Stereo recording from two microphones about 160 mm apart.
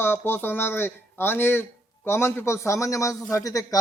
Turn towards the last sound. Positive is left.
turn(degrees=20)  # may be behind; listen again after turning